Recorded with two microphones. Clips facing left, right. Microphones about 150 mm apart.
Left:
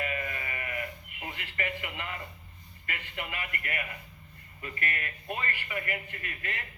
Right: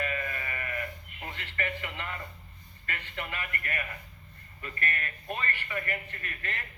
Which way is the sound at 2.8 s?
15° left (ahead or behind).